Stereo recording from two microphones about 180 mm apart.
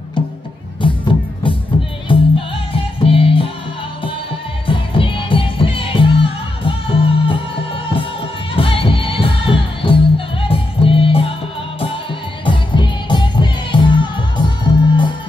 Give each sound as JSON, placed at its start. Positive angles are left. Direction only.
{"t": 2.0, "sound": "music", "side_deg": 30}
{"t": 4.6, "sound": "music", "side_deg": 30}
{"t": 12.4, "sound": "music", "side_deg": 25}